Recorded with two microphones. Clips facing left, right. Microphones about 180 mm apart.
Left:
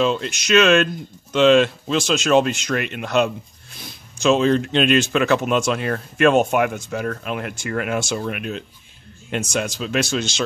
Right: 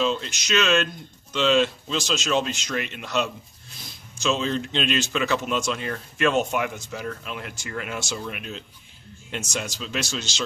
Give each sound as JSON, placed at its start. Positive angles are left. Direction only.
{"t": 0.0, "sound": "speech", "side_deg": 60}